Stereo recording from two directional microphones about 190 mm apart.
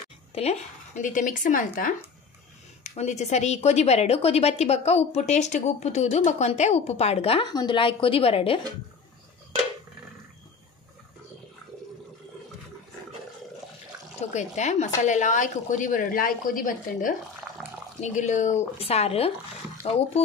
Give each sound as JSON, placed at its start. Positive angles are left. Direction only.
{"t": 0.3, "sound": "a woman's voice", "side_deg": 35}
{"t": 14.3, "sound": "a woman's voice", "side_deg": 40}